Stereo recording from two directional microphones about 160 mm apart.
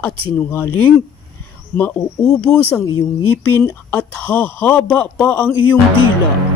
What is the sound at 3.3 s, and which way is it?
Speech, 10° left (ahead or behind).